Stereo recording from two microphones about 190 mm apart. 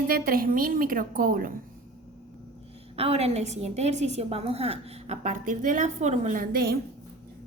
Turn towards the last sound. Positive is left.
turn(degrees=-50)  # may be behind; listen again after turning